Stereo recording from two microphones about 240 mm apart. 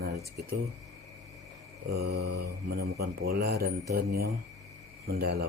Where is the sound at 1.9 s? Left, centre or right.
Right.